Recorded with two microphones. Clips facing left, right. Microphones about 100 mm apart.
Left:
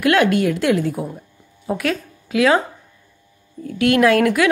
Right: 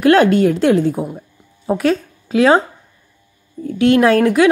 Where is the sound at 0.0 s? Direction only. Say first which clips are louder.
Right 5 dB; 30° right (ahead or behind).